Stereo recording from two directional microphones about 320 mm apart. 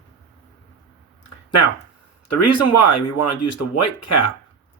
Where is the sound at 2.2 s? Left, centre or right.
Left.